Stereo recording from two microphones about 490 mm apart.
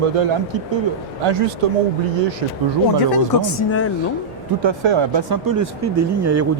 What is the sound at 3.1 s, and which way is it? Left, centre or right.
Speech, left.